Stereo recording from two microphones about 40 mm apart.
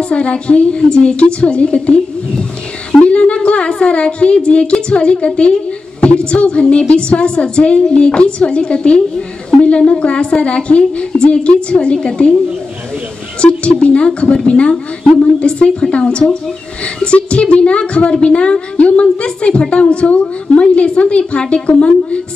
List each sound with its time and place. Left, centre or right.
0.0 s a woman's voice: left
13.4 s a woman's voice: left